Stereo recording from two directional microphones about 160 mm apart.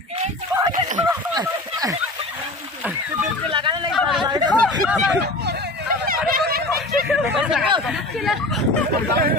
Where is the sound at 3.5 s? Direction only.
30° right (ahead or behind).